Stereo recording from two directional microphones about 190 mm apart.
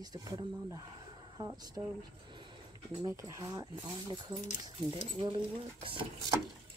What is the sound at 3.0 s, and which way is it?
Speech, 15° right (ahead or behind).